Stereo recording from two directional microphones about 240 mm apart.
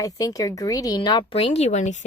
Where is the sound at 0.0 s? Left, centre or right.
Centre.